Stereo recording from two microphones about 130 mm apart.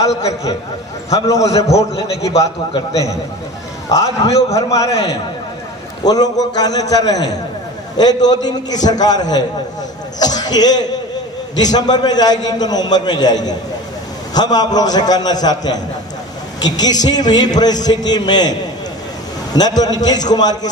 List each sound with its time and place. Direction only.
0.2 s a man's voice: 25° left (ahead or behind)
2.9 s a man's voice: 25° left (ahead or behind)
19.8 s a man's voice: 30° left (ahead or behind)